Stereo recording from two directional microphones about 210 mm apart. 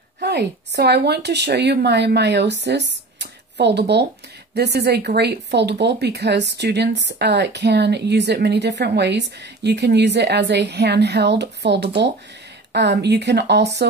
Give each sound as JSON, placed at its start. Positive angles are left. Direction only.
{"t": 0.2, "sound": "speech", "side_deg": -50}